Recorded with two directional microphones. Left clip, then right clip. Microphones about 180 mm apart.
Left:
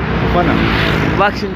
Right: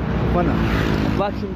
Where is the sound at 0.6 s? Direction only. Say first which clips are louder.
Left 8 dB; 50° right (ahead or behind).